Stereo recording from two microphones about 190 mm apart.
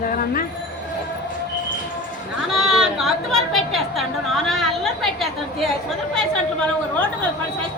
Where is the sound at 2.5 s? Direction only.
Centre (ahead or behind).